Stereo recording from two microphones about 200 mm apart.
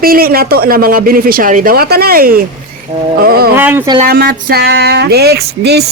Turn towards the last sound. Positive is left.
turn(degrees=-55)  # may be behind; listen again after turning